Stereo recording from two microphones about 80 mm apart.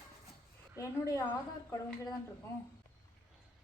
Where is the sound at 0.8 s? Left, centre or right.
Left.